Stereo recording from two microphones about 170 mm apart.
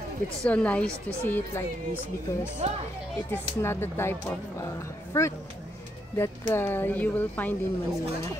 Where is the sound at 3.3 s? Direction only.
15° left (ahead or behind).